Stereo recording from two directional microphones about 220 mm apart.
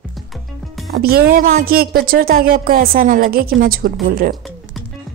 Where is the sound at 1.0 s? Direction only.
45° right (ahead or behind).